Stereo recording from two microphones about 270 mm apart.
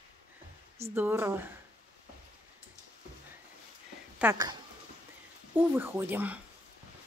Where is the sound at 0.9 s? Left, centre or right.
Centre.